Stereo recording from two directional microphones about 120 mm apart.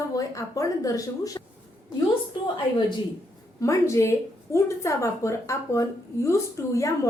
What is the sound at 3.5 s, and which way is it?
A woman's voice, 25° left (ahead or behind).